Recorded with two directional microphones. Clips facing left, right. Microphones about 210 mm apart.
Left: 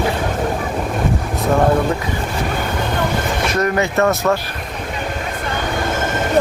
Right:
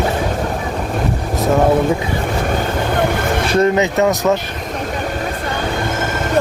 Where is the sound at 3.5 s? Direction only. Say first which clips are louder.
Right 4 dB; 25° right (ahead or behind).